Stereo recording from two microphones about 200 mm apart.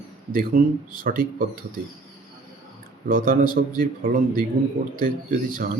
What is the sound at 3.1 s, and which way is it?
Speech, 45° right (ahead or behind).